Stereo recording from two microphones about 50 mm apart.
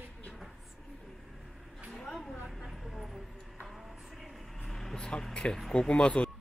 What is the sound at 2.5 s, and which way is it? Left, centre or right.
Vehicle, centre.